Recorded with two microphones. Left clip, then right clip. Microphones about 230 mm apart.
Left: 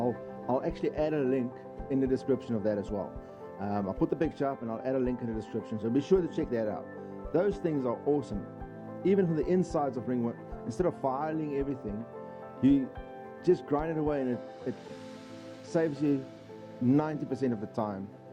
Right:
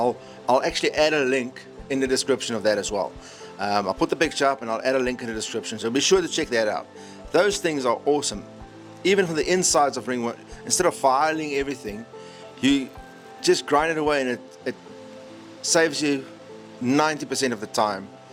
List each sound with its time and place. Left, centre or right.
0.4 s a man's voice: centre
15.6 s a man's voice: centre